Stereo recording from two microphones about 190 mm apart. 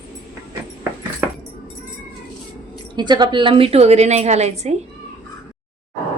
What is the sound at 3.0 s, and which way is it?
A woman's voice, 25° right (ahead or behind).